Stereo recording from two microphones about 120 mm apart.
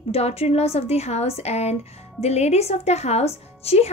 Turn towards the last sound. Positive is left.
turn(degrees=60)  # may be behind; listen again after turning